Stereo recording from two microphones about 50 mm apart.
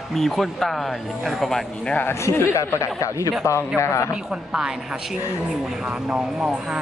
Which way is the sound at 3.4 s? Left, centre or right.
Left.